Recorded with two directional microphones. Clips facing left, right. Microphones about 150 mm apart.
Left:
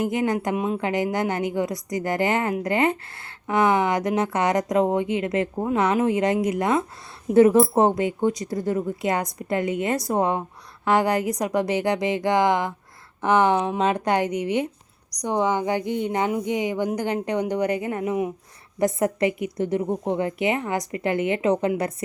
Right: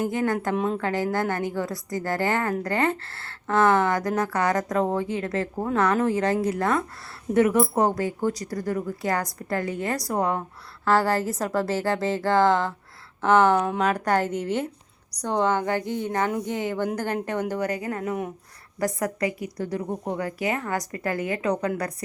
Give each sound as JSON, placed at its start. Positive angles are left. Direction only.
{"t": 0.0, "sound": "a woman's voice", "side_deg": 20}
{"t": 0.5, "sound": "a woman's voice", "side_deg": 5}